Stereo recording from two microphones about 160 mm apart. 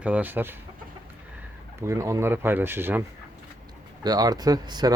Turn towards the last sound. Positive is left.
turn(degrees=-25)  # may be behind; listen again after turning